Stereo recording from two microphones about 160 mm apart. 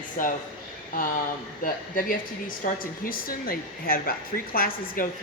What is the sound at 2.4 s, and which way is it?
A woman's voice, 60° left (ahead or behind).